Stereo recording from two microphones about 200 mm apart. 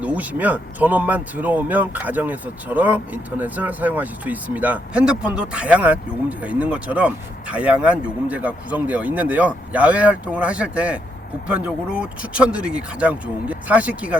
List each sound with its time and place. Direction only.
0.0 s speech: 10° right (ahead or behind)